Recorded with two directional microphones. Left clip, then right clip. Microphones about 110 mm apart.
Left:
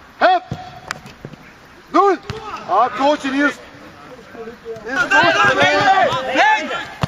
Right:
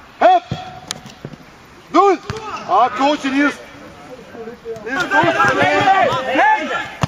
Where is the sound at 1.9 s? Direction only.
35° left (ahead or behind).